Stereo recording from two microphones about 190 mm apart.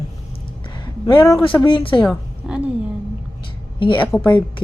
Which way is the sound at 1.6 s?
25° left (ahead or behind).